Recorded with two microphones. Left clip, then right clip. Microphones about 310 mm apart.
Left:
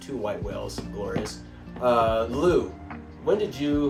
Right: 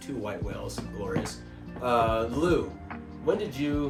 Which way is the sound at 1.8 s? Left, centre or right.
Centre.